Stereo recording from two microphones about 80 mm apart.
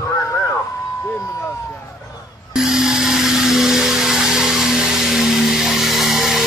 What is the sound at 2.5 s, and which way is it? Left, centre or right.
Blender, centre.